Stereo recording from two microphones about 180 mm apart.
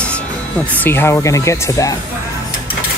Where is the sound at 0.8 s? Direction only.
15° left (ahead or behind).